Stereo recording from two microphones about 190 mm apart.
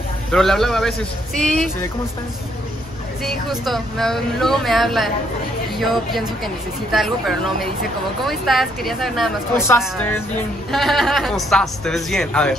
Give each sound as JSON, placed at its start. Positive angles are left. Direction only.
{"t": 0.3, "sound": "a woman's voice", "side_deg": 0}
{"t": 3.3, "sound": "a woman's voice", "side_deg": 0}
{"t": 9.7, "sound": "a woman's voice", "side_deg": 10}